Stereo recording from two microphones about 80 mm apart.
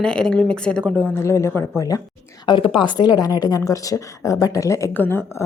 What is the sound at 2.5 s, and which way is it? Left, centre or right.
Speech, left.